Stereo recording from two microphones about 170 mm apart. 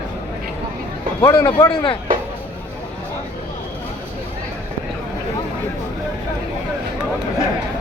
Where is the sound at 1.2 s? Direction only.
20° left (ahead or behind).